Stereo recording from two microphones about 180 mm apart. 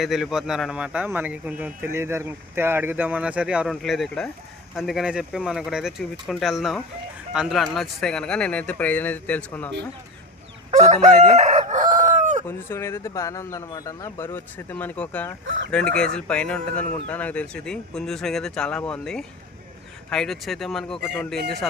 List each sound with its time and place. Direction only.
0.0 s speech: centre (ahead or behind)
10.7 s chicken: 40° right (ahead or behind)
12.5 s speech: 15° left (ahead or behind)
15.4 s chicken: 90° right
16.0 s speech: 5° left (ahead or behind)